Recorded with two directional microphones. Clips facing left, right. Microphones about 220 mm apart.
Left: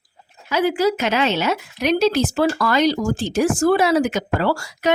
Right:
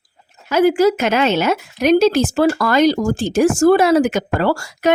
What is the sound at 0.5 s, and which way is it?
Speech, 45° right (ahead or behind).